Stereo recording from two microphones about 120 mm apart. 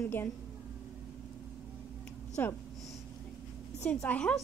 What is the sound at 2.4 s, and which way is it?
Speech, 15° left (ahead or behind).